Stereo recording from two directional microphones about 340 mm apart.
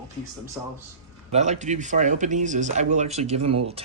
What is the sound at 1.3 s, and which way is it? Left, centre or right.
Speech, centre.